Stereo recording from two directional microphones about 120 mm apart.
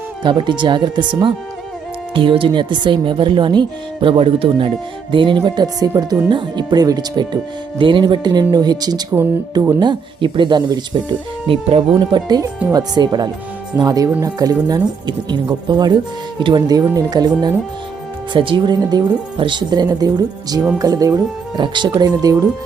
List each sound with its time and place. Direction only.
0.2 s speech: 40° right (ahead or behind)
11.4 s speech: 50° right (ahead or behind); by 22.4 s 30° right (ahead or behind)